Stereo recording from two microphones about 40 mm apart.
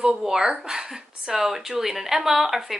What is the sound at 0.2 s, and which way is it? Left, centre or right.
Speech, centre.